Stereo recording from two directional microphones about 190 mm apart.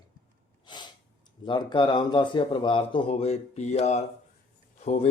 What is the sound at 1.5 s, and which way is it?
Speech, 25° left (ahead or behind).